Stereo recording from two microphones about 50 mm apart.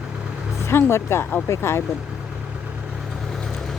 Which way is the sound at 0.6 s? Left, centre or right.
Left.